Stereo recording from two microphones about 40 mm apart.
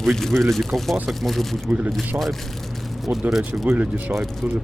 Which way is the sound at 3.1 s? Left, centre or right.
Right.